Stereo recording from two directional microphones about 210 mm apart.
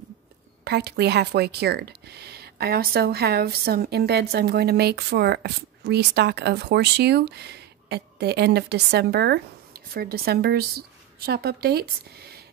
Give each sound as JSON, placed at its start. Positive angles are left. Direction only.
{"t": 0.7, "sound": "speech", "side_deg": -50}